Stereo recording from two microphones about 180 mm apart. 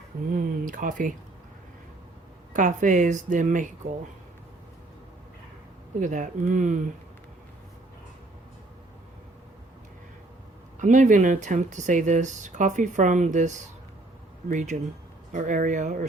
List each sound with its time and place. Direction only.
0.3 s speech: 50° right (ahead or behind)
2.5 s speech: 45° right (ahead or behind)
6.0 s speech: 45° right (ahead or behind)
10.8 s speech: 45° right (ahead or behind)
14.5 s speech: 40° right (ahead or behind)